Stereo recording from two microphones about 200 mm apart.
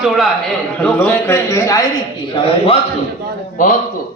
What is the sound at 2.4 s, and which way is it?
Speech, 30° left (ahead or behind).